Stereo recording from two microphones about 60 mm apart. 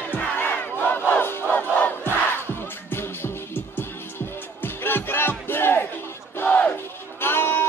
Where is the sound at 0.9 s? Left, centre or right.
Left.